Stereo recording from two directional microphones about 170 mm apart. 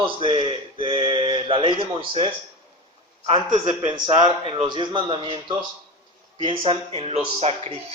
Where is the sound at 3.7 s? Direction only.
25° right (ahead or behind).